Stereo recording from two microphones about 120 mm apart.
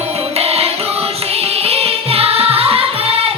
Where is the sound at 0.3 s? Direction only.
55° right (ahead or behind).